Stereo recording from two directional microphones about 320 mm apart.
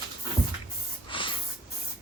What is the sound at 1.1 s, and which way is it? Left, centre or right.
Snort, centre.